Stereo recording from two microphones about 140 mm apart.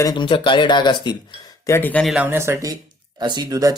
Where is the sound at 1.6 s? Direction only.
15° left (ahead or behind).